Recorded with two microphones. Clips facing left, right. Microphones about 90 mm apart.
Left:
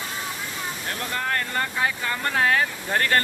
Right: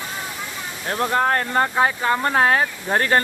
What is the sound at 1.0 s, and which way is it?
Speech, 35° right (ahead or behind).